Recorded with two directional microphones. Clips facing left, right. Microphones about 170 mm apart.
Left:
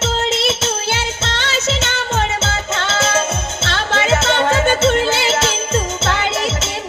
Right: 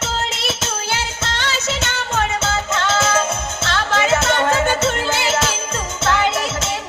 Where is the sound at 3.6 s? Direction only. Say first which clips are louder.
Even; 25° left (ahead or behind).